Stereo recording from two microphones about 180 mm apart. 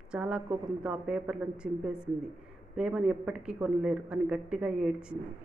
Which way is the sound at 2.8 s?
5° right (ahead or behind).